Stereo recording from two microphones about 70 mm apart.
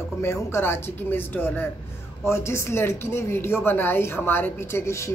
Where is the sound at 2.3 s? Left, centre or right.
Left.